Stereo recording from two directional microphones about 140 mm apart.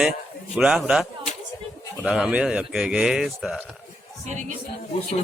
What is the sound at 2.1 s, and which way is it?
A man's voice, 5° right (ahead or behind).